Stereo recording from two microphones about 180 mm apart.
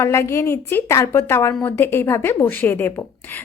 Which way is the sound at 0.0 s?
15° left (ahead or behind).